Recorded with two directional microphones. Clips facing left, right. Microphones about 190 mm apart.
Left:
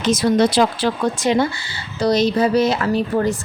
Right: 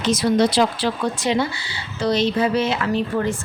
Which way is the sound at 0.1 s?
45° left (ahead or behind).